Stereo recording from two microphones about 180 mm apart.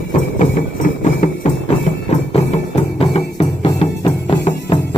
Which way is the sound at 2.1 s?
40° left (ahead or behind).